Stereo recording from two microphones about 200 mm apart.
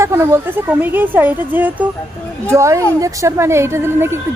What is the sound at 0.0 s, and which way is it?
A woman's voice, 15° right (ahead or behind).